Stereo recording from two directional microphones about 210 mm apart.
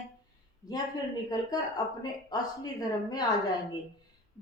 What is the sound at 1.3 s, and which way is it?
A woman's voice, 20° left (ahead or behind).